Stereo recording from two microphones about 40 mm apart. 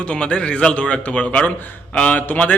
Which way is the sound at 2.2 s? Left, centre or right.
Left.